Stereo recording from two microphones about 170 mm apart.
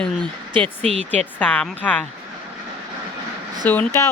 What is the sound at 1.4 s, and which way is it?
Speech, 10° left (ahead or behind).